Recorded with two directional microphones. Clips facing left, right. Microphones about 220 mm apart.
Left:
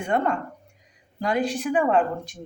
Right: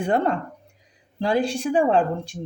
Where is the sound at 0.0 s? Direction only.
30° right (ahead or behind).